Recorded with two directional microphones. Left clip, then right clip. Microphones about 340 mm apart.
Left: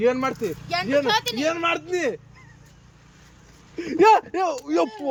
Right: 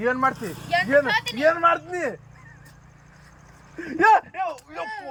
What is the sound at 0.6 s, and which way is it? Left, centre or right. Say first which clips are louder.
Speech: right 3 dB; centre.